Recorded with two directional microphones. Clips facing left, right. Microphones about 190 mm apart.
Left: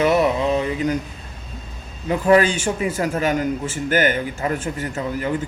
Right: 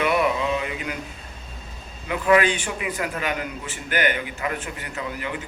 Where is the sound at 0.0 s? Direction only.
40° left (ahead or behind).